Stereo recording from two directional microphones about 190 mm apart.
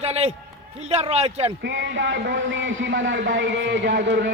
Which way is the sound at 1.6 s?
75° right (ahead or behind).